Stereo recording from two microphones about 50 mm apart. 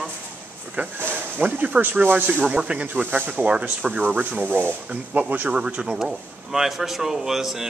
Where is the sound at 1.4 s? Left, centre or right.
Right.